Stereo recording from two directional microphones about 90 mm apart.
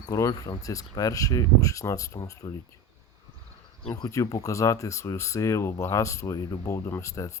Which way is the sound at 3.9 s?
40° left (ahead or behind).